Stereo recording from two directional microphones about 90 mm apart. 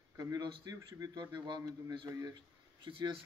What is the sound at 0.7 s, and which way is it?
Speech, 45° right (ahead or behind).